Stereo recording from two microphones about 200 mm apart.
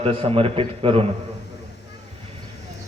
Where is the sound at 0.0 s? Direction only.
30° right (ahead or behind).